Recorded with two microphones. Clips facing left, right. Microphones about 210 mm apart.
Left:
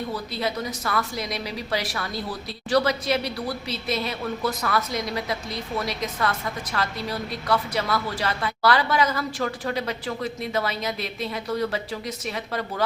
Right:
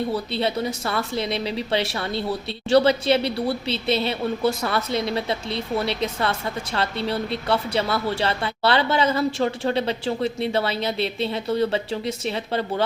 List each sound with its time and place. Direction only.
0.1 s speech: 30° right (ahead or behind)